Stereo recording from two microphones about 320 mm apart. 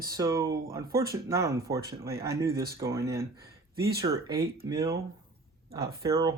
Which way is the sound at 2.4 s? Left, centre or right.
Right.